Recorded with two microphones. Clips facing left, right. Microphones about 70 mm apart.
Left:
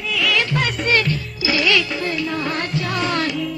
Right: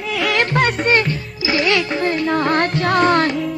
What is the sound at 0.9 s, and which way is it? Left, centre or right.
Music, right.